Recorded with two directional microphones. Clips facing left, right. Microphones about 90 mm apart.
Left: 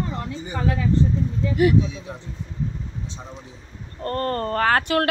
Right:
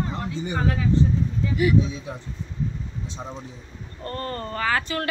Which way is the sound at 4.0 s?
50° left (ahead or behind).